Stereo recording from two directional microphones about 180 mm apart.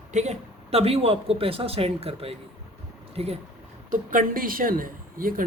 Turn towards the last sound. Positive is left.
turn(degrees=-50)  # may be behind; listen again after turning